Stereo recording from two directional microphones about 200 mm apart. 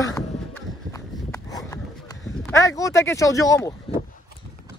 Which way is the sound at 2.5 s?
15° left (ahead or behind).